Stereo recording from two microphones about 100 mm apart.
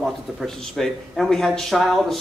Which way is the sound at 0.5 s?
5° left (ahead or behind).